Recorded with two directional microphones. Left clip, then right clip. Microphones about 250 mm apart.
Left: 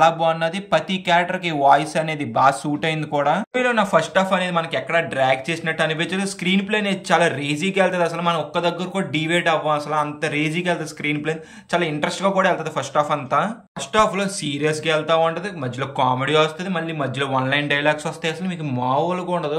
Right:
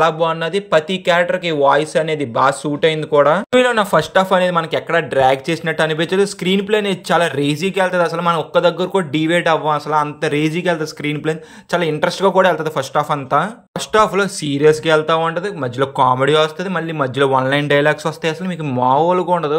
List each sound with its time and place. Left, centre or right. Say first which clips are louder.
0.0 s speech: right 1 dB; centre